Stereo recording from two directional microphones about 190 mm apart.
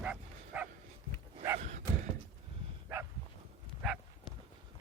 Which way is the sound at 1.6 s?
35° right (ahead or behind).